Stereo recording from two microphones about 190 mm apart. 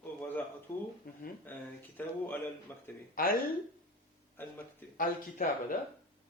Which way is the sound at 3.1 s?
50° left (ahead or behind).